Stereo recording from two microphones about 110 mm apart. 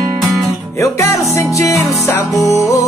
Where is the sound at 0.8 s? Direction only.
25° left (ahead or behind).